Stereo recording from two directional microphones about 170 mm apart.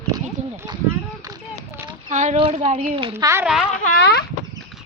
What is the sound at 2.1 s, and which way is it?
Speech, 45° right (ahead or behind).